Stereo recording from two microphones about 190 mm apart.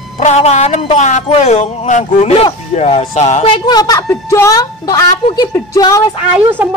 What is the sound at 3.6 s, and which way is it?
Speech, 20° left (ahead or behind).